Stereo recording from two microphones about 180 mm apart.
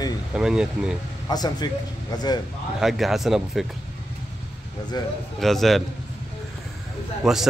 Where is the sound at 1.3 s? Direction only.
20° left (ahead or behind).